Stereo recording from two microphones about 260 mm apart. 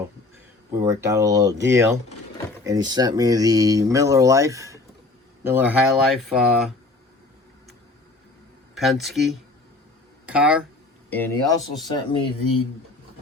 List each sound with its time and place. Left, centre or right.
0.7 s speech: centre
8.7 s speech: centre
11.1 s speech: centre